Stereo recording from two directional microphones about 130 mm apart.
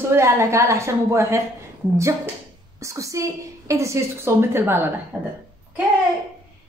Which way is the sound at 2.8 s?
25° right (ahead or behind).